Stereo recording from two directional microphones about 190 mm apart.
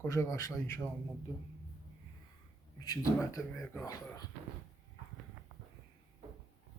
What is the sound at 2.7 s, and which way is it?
Speech, 20° left (ahead or behind).